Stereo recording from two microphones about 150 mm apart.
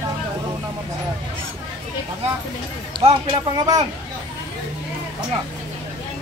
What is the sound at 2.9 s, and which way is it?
Speech, 35° right (ahead or behind).